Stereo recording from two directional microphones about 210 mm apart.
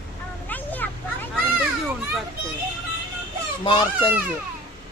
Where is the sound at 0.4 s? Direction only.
10° left (ahead or behind).